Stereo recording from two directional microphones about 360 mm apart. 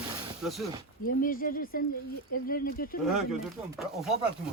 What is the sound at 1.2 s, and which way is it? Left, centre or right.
Speech, left.